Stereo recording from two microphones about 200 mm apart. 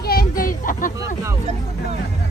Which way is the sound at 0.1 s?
45° left (ahead or behind).